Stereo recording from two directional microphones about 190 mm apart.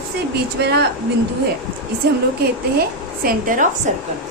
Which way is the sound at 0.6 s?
60° right (ahead or behind).